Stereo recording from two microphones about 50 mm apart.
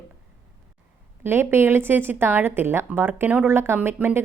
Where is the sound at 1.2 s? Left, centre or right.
Right.